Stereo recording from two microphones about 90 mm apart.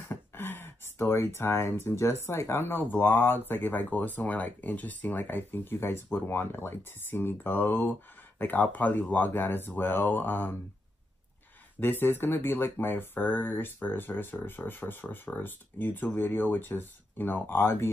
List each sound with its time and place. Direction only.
0.1 s a sound: 25° left (ahead or behind)
2.2 s speech: 30° left (ahead or behind)
11.8 s speech: 25° left (ahead or behind)